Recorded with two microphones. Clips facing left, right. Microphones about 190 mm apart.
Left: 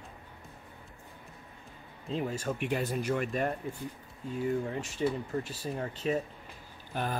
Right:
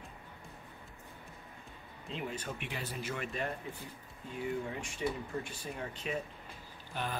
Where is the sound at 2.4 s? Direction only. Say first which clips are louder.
Left 10 dB; 45° left (ahead or behind).